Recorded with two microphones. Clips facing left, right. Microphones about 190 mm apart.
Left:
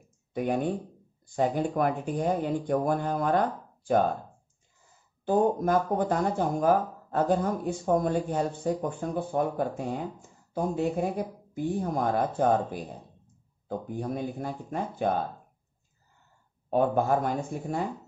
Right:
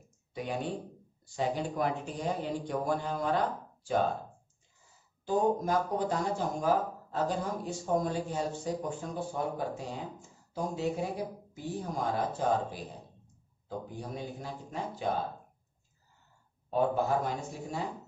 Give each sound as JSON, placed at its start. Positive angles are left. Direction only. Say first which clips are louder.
{"t": 0.3, "sound": "speech", "louder": "left 7 dB", "side_deg": 50}
{"t": 5.2, "sound": "speech", "louder": "left 4 dB", "side_deg": 55}
{"t": 16.7, "sound": "speech", "louder": "left 4 dB", "side_deg": 55}